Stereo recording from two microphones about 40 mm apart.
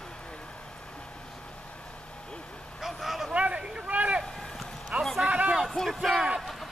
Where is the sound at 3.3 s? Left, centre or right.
Right.